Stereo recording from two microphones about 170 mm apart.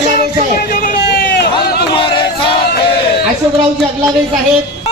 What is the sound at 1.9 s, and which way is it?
Choir, 30° left (ahead or behind).